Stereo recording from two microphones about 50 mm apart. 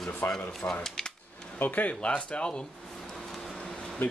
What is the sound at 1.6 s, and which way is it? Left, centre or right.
Speech, left.